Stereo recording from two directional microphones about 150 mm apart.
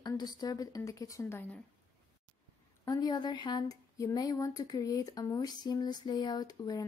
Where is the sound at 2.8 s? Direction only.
25° left (ahead or behind).